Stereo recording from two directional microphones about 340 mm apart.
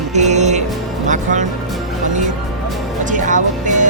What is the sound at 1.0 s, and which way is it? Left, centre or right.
Speech, right.